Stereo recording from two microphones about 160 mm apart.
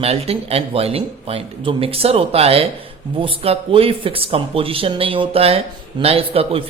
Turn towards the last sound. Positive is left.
turn(degrees=-35)  # may be behind; listen again after turning